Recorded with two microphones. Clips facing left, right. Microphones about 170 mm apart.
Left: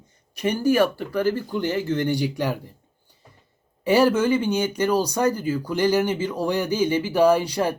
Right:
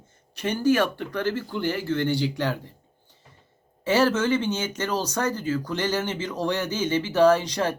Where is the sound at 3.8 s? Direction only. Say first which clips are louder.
Left 3 dB; 15° left (ahead or behind).